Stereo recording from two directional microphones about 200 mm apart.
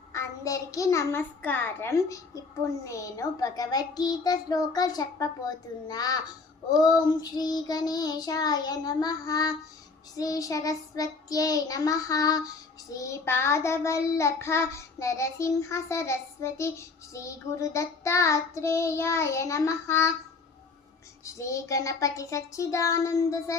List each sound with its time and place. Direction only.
0.1 s child singing: 15° left (ahead or behind)
2.8 s a child's voice: 15° left (ahead or behind)
10.2 s child singing: 15° left (ahead or behind)
21.2 s child singing: 15° left (ahead or behind)